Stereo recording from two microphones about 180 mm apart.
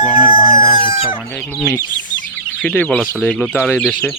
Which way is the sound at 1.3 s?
5° left (ahead or behind).